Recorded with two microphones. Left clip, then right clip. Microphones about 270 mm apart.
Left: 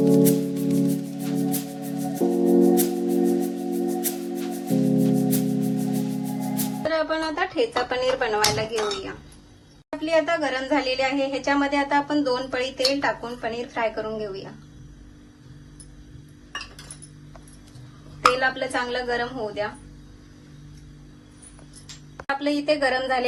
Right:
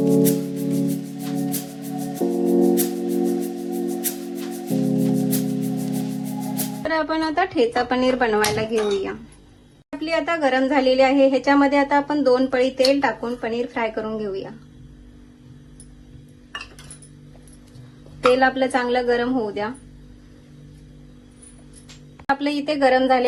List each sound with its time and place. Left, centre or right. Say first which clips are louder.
0.0 s music: even; centre
6.9 s speech: right 4 dB; right
10.0 s a woman's voice: right 1 dB; right
18.3 s a woman's voice: right 5 dB; right
22.2 s a woman's voice: right 3 dB; right